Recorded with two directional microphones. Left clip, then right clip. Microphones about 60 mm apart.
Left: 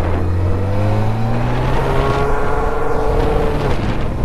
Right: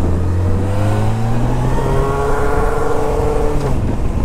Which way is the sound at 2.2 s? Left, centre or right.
Right.